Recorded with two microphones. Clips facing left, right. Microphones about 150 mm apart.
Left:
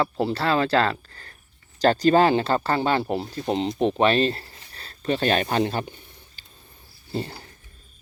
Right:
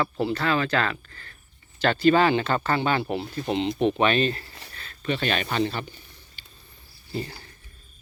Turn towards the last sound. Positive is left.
turn(degrees=30)  # may be behind; listen again after turning